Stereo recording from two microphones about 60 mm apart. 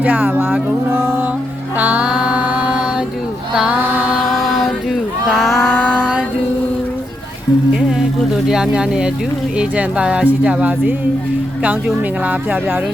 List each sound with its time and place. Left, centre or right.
0.0 s speech: right
1.8 s music: right
2.0 s a sound: centre
3.7 s mantra: right
4.3 s music: centre
5.3 s a sound: centre
5.7 s a sound: left
7.7 s humming: centre
8.4 s speech: centre; by 12.5 s right